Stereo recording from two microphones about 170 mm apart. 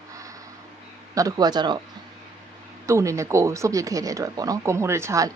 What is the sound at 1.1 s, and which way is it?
Speech, 20° right (ahead or behind).